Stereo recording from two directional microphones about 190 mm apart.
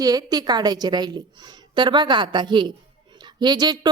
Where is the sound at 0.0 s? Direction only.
20° right (ahead or behind).